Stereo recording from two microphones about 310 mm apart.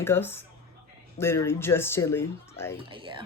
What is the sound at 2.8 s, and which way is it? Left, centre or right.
Speech, centre.